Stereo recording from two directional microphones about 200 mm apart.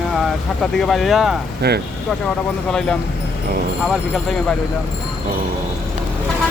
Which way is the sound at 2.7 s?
5° left (ahead or behind).